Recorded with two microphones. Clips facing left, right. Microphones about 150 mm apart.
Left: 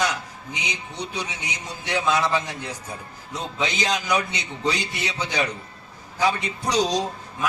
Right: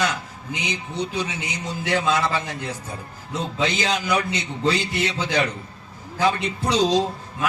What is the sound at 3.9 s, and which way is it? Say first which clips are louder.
Speech: right 1 dB; 15° left (ahead or behind).